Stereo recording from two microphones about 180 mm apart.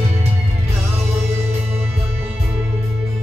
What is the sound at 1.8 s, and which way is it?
Music, 35° right (ahead or behind).